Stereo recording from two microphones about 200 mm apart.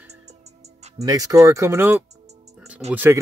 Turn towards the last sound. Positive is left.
turn(degrees=-10)  # may be behind; listen again after turning